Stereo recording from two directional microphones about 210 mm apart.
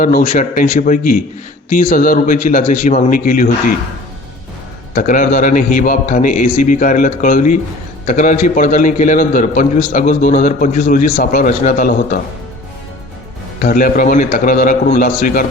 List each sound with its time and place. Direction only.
0.0 s a man's voice: 40° left (ahead or behind)
4.9 s a man's voice: 40° left (ahead or behind)
13.6 s a man's voice: 40° left (ahead or behind)